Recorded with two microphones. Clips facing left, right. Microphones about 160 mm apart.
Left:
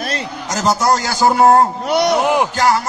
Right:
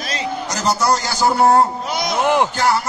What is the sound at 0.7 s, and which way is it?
A man's voice, 45° left (ahead or behind).